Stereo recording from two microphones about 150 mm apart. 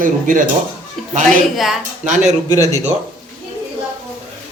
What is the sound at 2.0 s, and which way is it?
Speech, 50° right (ahead or behind).